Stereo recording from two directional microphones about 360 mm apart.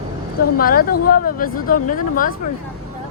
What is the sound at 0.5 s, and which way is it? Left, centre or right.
Speech, left.